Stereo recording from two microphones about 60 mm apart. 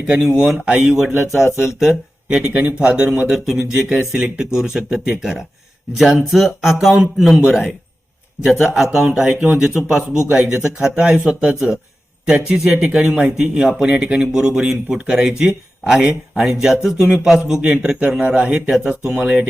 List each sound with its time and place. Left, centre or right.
0.1 s speech: centre
2.5 s speech: right; by 7.0 s centre
8.4 s speech: centre
9.0 s speech: centre
9.6 s a man's voice: centre